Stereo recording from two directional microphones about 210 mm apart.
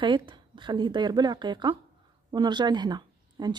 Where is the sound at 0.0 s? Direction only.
20° right (ahead or behind).